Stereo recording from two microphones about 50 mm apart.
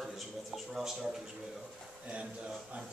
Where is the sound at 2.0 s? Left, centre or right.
Right.